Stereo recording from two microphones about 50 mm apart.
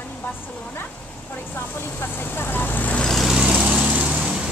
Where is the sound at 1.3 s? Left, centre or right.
Left.